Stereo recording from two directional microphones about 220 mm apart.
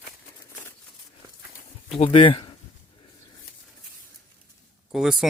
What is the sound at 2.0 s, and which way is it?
Speech, 25° left (ahead or behind).